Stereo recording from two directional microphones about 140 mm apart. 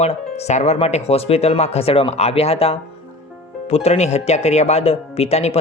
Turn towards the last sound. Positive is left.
turn(degrees=50)  # may be behind; listen again after turning